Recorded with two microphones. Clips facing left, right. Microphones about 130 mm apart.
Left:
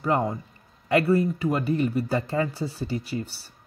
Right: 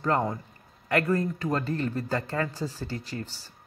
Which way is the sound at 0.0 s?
10° left (ahead or behind).